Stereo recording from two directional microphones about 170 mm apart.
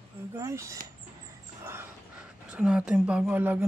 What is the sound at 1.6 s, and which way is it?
Crow, 15° right (ahead or behind).